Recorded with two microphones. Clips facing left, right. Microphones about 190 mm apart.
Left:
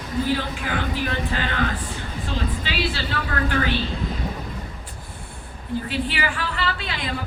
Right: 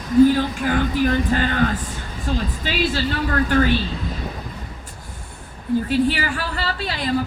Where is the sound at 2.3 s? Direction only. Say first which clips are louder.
Right 4 dB; 45° right (ahead or behind).